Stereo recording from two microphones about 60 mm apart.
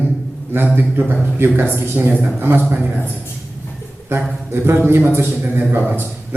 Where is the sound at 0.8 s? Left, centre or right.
Right.